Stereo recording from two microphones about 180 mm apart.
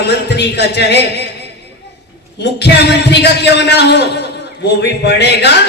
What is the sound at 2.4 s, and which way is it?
A man's voice, 70° left (ahead or behind).